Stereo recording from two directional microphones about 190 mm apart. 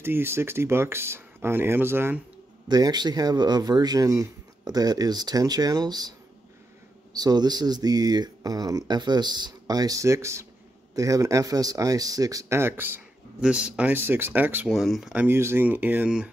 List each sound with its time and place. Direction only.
0.0 s speech: 10° right (ahead or behind)
7.2 s speech: 20° right (ahead or behind)